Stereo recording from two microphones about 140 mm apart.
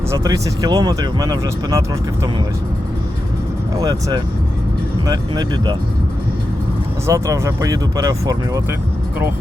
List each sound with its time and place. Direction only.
0.1 s speech: 25° right (ahead or behind)
3.8 s speech: 25° right (ahead or behind)
7.1 s speech: 20° right (ahead or behind)